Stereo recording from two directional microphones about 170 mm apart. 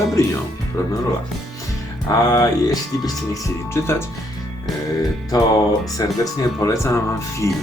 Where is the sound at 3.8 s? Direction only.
15° left (ahead or behind).